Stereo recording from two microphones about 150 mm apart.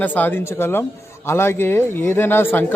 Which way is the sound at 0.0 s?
15° left (ahead or behind).